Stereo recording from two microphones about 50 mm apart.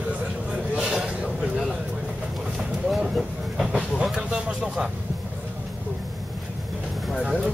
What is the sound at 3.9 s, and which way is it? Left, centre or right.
Vehicle, centre.